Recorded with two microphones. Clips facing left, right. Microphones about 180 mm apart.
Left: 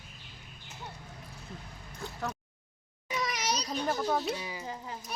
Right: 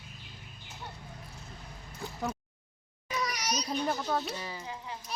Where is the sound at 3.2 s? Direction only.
25° left (ahead or behind).